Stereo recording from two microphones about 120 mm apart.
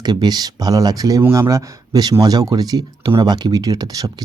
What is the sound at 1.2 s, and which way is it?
Speech, 20° right (ahead or behind).